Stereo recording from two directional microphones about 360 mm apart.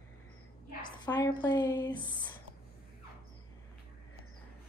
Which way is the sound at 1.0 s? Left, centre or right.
Centre.